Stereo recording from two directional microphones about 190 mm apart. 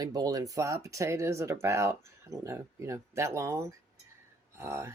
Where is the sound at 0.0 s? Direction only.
20° right (ahead or behind).